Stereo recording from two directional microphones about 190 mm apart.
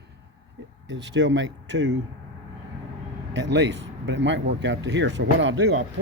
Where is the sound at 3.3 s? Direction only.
70° right (ahead or behind).